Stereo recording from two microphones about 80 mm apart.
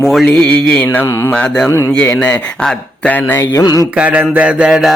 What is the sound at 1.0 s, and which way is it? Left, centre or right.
Mantra, left.